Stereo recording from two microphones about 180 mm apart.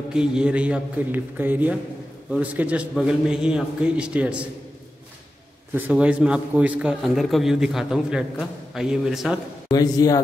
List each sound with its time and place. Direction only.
0.1 s a man's voice: 5° right (ahead or behind)
5.8 s a man's voice: 10° right (ahead or behind)
9.7 s a man's voice: 20° left (ahead or behind)